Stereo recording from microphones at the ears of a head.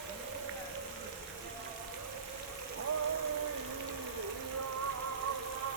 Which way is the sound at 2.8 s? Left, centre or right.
Right.